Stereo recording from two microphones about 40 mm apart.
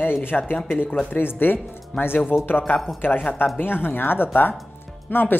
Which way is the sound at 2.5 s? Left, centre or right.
Left.